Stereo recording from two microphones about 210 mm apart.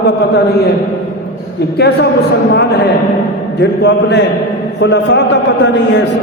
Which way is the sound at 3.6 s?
55° left (ahead or behind).